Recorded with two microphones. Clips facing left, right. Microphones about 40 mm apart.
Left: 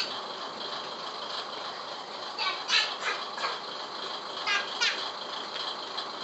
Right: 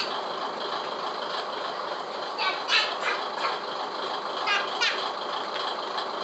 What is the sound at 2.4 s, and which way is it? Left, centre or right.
Bird, centre.